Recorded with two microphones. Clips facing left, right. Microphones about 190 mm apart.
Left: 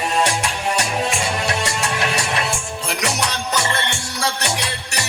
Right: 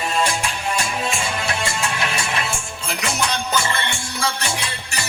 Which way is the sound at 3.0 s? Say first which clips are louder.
Right 1 dB; 75° left (ahead or behind).